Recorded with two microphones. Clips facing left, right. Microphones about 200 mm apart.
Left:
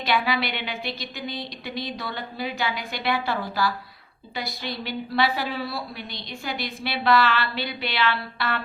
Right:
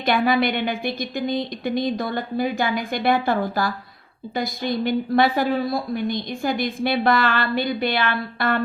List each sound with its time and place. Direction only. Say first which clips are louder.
0.0 s a woman's voice: right 6 dB; 50° right (ahead or behind)